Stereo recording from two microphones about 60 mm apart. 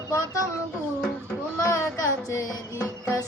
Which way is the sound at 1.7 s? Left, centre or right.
Left.